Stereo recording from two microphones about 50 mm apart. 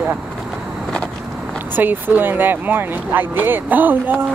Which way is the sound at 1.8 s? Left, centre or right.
Right.